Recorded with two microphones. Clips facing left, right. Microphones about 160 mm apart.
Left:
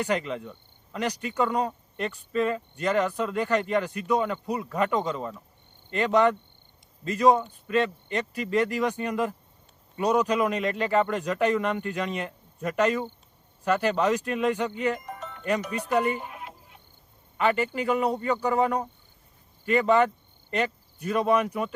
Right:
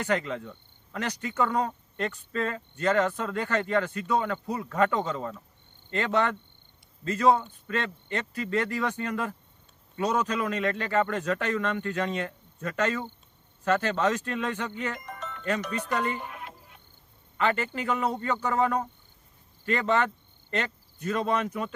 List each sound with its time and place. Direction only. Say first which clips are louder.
0.0 s speech: left 1 dB; 15° left (ahead or behind)
16.2 s a sound: even; 70° right (ahead or behind)
17.3 s speech: left 3 dB; 15° left (ahead or behind)